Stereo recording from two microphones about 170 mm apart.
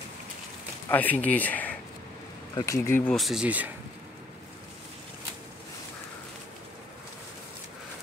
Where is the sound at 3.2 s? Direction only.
Centre (ahead or behind).